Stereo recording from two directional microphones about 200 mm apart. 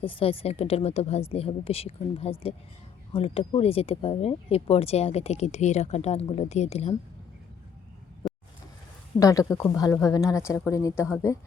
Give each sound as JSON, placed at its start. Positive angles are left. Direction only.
{"t": 0.0, "sound": "a woman's voice", "side_deg": 25}
{"t": 8.2, "sound": "vehicle", "side_deg": 0}
{"t": 9.1, "sound": "speech", "side_deg": 15}